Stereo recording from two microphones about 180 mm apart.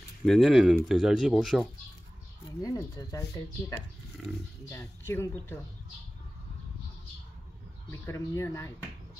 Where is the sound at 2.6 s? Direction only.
20° left (ahead or behind).